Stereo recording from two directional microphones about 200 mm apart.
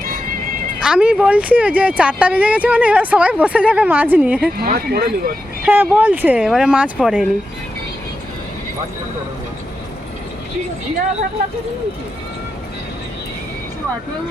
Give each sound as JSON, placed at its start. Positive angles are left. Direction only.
{"t": 0.8, "sound": "speech", "side_deg": -5}
{"t": 4.5, "sound": "speech", "side_deg": -50}
{"t": 5.6, "sound": "speech", "side_deg": -10}